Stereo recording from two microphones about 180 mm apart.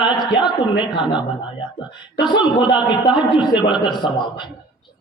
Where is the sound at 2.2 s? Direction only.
25° left (ahead or behind).